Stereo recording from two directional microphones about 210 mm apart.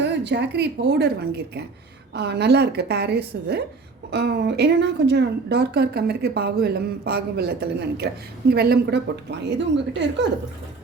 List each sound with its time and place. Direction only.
0.0 s a woman's voice: 55° right (ahead or behind)